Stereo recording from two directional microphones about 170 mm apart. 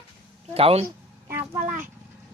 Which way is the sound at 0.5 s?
35° right (ahead or behind).